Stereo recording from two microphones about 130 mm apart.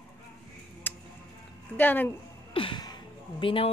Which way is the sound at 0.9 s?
15° left (ahead or behind).